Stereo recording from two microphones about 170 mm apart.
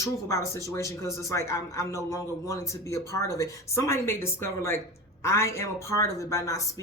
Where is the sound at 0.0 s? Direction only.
20° left (ahead or behind).